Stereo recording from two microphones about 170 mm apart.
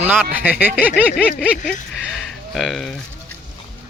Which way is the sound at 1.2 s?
5° left (ahead or behind).